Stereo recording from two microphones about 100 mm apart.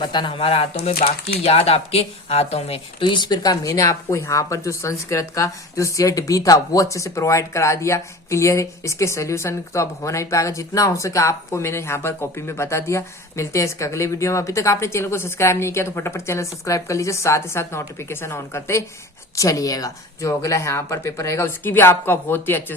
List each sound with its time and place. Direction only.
0.0 s speech: 50° left (ahead or behind); by 3.1 s 80° left
3.1 s speech: 45° left (ahead or behind); by 22.6 s 20° left (ahead or behind)